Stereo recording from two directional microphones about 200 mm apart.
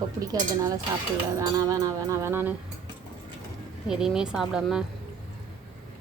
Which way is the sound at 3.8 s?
5° right (ahead or behind).